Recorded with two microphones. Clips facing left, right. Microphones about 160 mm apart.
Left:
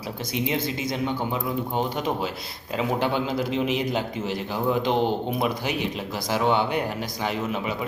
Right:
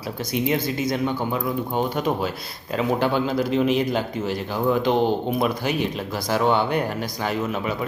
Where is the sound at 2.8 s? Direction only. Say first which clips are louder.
Right 3 dB; 20° left (ahead or behind).